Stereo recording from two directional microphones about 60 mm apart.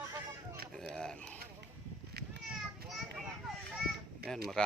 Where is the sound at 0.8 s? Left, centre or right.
Centre.